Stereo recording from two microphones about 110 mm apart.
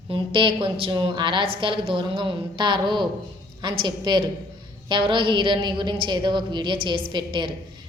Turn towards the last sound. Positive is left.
turn(degrees=-45)  # may be behind; listen again after turning